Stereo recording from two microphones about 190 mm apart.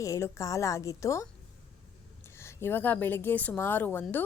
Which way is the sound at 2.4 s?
15° left (ahead or behind).